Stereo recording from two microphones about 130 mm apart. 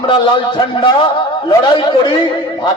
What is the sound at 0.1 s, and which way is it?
A man's voice, 40° left (ahead or behind).